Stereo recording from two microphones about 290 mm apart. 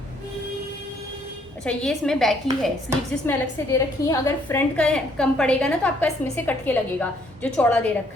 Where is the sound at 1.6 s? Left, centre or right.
Centre.